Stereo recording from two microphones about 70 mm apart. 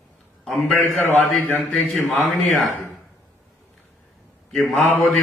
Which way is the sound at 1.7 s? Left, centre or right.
Centre.